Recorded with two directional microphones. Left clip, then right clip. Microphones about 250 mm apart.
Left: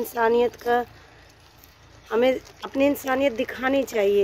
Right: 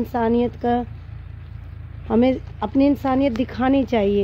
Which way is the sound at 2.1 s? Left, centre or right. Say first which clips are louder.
Right 2 dB; centre.